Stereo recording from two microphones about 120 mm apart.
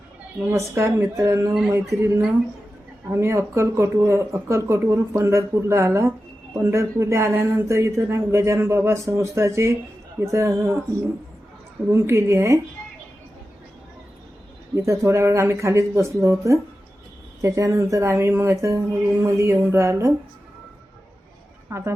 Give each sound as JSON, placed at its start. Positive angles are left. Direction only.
{"t": 0.5, "sound": "speech", "side_deg": -20}
{"t": 11.9, "sound": "speech", "side_deg": -20}
{"t": 14.8, "sound": "speech", "side_deg": -25}
{"t": 21.7, "sound": "speech", "side_deg": -25}